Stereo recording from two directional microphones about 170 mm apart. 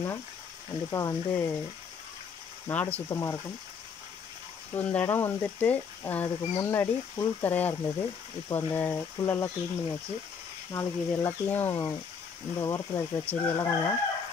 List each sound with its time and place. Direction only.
0.8 s speech: 20° left (ahead or behind)
2.7 s speech: 10° left (ahead or behind)
4.7 s speech: 10° left (ahead or behind)